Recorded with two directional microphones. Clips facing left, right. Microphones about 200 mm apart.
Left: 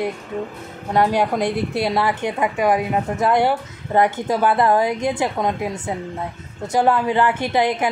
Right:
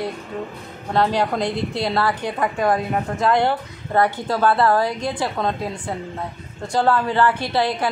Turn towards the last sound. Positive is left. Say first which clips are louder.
# left 2 dB
turn(degrees=15)  # may be behind; listen again after turning